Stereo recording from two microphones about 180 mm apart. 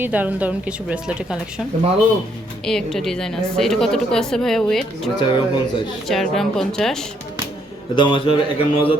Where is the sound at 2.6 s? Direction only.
5° left (ahead or behind).